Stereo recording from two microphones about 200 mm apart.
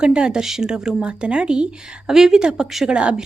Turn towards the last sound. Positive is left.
turn(degrees=-5)  # may be behind; listen again after turning